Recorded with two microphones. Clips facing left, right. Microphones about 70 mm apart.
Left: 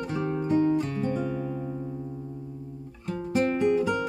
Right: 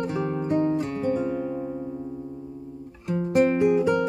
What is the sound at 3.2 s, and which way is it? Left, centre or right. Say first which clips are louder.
Music: right 4 dB; centre.